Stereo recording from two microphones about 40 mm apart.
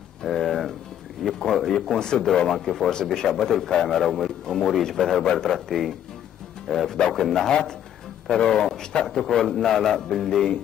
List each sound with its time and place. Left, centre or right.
0.2 s a sound: centre
1.2 s a man's voice: centre
7.1 s a man's voice: centre